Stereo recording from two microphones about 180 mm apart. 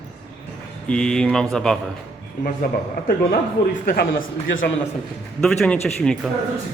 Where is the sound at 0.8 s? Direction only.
5° left (ahead or behind).